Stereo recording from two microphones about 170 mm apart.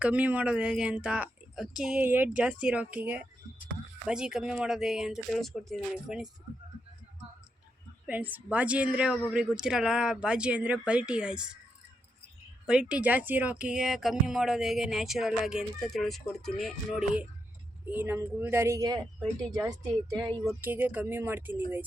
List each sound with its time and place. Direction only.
0.0 s speech: 10° right (ahead or behind)
8.0 s speech: 10° right (ahead or behind)
12.6 s speech: 5° right (ahead or behind)
19.2 s speech: centre (ahead or behind)
19.6 s speech: 20° right (ahead or behind)
20.6 s speech: 10° right (ahead or behind)